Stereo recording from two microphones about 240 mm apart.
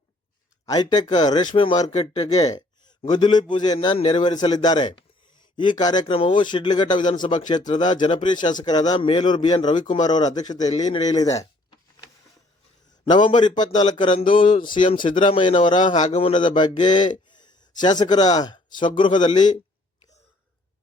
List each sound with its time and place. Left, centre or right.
0.6 s speech: centre
2.4 s a man's voice: centre
10.8 s a man's voice: left
11.1 s speech: centre
13.4 s a man's voice: centre
14.8 s speech: left
15.2 s a man's voice: left
17.2 s a sound: centre
18.0 s a man's voice: centre